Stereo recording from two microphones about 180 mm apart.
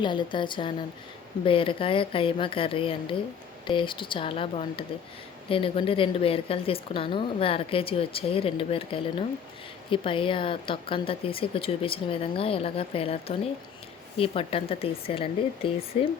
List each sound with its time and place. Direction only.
0.0 s a woman's voice: 25° left (ahead or behind)